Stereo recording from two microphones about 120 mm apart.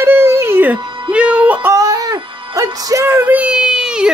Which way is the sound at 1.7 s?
30° right (ahead or behind).